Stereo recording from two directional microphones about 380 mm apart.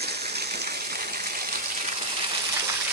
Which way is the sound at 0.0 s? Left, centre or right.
Right.